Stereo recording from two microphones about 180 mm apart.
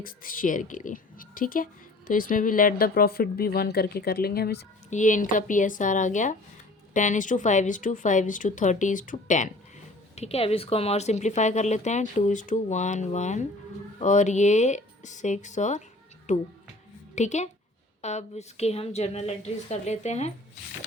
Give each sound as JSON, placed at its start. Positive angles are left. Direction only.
{"t": 0.0, "sound": "speech", "side_deg": 50}
{"t": 4.9, "sound": "speech", "side_deg": 45}